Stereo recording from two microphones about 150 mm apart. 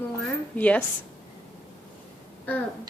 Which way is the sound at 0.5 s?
10° left (ahead or behind).